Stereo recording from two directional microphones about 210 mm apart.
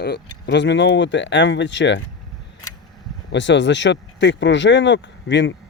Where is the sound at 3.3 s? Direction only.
60° left (ahead or behind).